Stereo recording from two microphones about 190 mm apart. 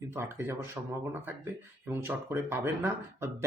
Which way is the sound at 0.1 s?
10° right (ahead or behind).